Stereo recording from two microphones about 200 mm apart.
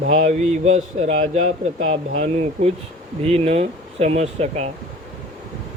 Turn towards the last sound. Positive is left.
turn(degrees=-30)  # may be behind; listen again after turning